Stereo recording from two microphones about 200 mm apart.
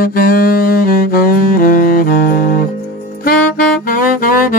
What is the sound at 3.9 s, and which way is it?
Saxophone, 45° left (ahead or behind).